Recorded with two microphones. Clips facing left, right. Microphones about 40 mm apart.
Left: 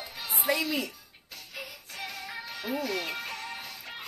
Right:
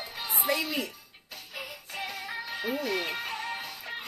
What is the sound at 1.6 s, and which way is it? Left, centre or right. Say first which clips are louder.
Music: right 3 dB; centre.